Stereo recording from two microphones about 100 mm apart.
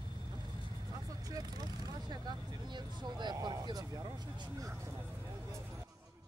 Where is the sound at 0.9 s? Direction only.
40° right (ahead or behind).